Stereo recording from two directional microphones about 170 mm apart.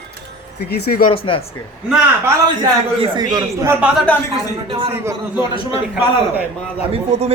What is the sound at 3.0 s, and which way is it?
Speech, 25° right (ahead or behind).